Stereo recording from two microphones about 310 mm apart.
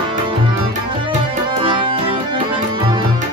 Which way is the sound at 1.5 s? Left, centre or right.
Centre.